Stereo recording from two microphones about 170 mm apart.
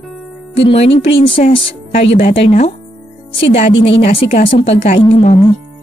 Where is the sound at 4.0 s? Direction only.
35° left (ahead or behind).